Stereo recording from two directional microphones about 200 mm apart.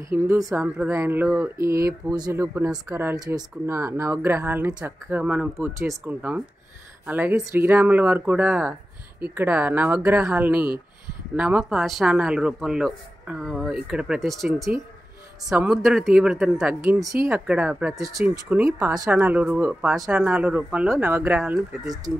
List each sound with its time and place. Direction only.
0.1 s speech: 15° right (ahead or behind)
18.7 s speech: 15° right (ahead or behind)